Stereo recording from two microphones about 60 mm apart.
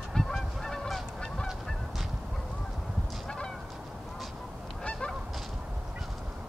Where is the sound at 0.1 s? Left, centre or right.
Centre.